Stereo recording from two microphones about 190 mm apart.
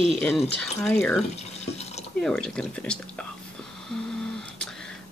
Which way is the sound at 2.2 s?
5° left (ahead or behind).